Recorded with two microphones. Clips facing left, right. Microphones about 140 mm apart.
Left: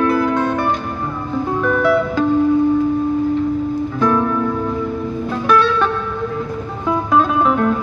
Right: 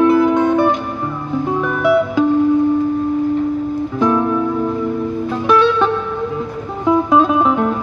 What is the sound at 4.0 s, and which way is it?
Music, 20° right (ahead or behind).